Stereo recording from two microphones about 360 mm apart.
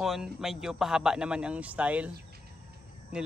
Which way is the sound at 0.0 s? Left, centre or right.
Centre.